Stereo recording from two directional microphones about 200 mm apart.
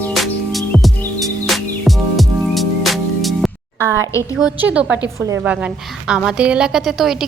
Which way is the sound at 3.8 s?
15° right (ahead or behind).